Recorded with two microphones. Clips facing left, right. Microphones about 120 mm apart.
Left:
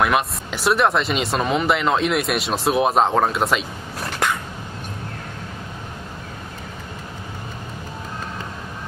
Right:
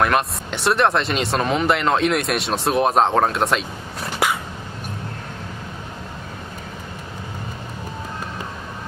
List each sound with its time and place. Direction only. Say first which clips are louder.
0.0 s speech: even; centre (ahead or behind)